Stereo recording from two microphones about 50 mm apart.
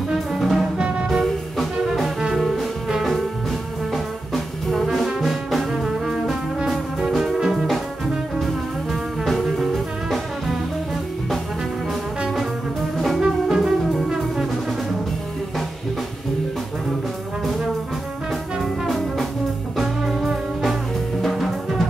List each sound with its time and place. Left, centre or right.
0.1 s music: centre
0.7 s music: right
2.3 s music: centre
3.9 s music: centre
4.8 s brass instrument: centre
7.1 s music: centre
9.2 s music: centre
13.2 s music: centre
14.0 s brass instrument: centre
18.6 s brass instrument: centre
19.8 s music: centre